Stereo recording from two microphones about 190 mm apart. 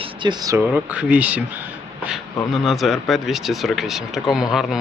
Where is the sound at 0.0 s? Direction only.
25° right (ahead or behind).